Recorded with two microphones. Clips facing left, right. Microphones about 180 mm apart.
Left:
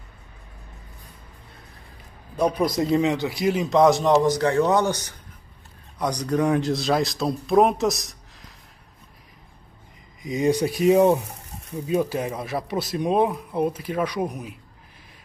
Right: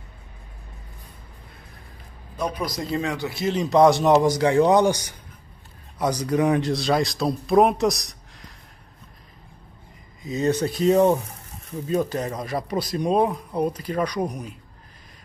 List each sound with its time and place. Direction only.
2.3 s a man's voice: 25° left (ahead or behind)
3.7 s speech: centre (ahead or behind)
10.2 s speech: 15° left (ahead or behind)